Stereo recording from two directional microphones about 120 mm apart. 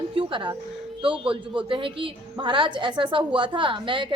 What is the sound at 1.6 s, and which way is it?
A woman's voice, 45° right (ahead or behind).